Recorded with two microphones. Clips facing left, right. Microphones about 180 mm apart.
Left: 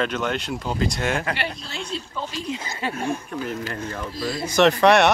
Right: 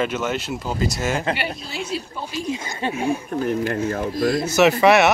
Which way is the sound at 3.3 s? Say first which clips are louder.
Right 7 dB; 50° right (ahead or behind).